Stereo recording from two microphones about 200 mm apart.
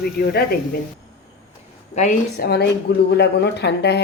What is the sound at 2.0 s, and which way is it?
Speech, 35° left (ahead or behind).